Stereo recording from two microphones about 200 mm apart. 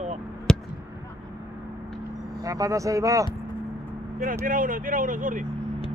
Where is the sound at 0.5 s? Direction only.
5° left (ahead or behind).